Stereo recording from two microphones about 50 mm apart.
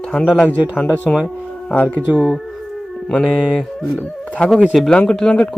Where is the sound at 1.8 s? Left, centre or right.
Left.